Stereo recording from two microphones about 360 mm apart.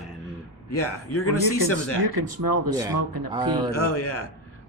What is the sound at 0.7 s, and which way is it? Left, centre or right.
Speech, left.